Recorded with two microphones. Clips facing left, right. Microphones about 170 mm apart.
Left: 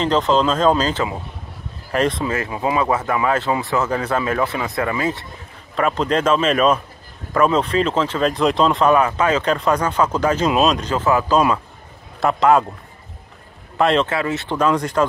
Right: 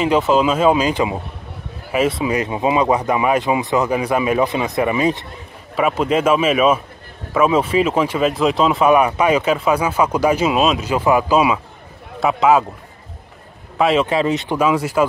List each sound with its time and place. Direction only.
0.0 s speech: 10° right (ahead or behind)
5.8 s speech: 10° right (ahead or behind)
13.7 s speech: 5° right (ahead or behind)
14.0 s speech: 20° right (ahead or behind)